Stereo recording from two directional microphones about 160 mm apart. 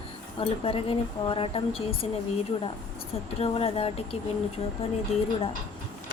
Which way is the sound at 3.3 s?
40° left (ahead or behind).